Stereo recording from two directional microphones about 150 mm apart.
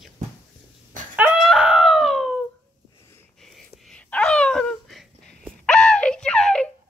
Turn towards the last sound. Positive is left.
turn(degrees=5)  # may be behind; listen again after turning